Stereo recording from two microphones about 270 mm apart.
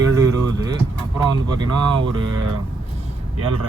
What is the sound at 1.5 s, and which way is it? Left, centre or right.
Speech, centre.